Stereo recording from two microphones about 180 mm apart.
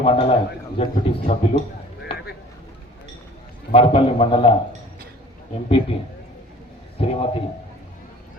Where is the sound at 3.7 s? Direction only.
30° left (ahead or behind).